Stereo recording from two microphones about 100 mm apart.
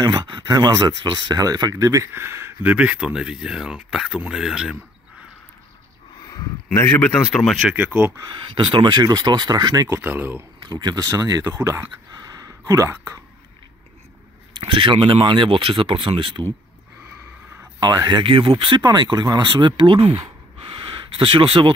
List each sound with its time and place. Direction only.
0.0 s speech: 45° right (ahead or behind); by 4.7 s 5° right (ahead or behind)
6.2 s speech: 30° left (ahead or behind)
7.0 s speech: 10° left (ahead or behind)
7.7 s speech: 15° right (ahead or behind)
8.3 s speech: 50° right (ahead or behind)
9.8 s speech: 25° right (ahead or behind)
10.6 s speech: 45° right (ahead or behind); by 11.9 s 30° right (ahead or behind)
12.1 s a sound: 40° right (ahead or behind)
14.5 s speech: 60° right (ahead or behind)
17.7 s speech: 45° right (ahead or behind)
18.2 s speech: 65° right (ahead or behind)
18.9 s speech: 45° right (ahead or behind); by 20.2 s 70° right (ahead or behind)
20.6 s a sound: 55° right (ahead or behind)